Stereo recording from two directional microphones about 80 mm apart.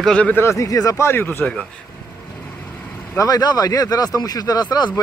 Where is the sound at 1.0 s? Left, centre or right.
Left.